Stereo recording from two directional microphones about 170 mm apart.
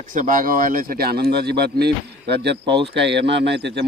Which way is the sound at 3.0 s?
90° right.